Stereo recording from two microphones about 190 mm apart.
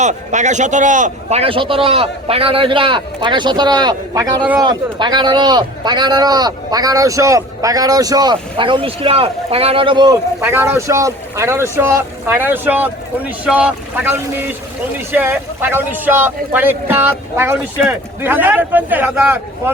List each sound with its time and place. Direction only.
0.0 s speech: 40° right (ahead or behind); by 19.7 s 10° right (ahead or behind)